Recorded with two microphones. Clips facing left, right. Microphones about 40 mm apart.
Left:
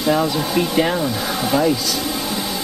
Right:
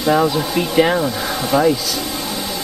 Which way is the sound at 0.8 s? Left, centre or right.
Centre.